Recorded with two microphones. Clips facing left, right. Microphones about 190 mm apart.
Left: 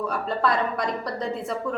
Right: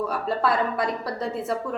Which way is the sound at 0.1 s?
5° right (ahead or behind).